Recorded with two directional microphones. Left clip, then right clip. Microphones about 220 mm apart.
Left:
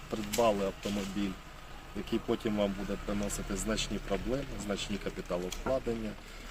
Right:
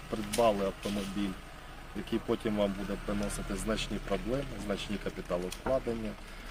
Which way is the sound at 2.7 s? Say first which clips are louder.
Even; 50° right (ahead or behind).